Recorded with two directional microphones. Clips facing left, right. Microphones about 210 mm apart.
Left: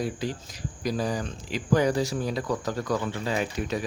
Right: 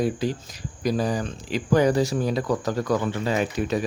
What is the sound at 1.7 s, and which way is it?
Speech, 55° right (ahead or behind).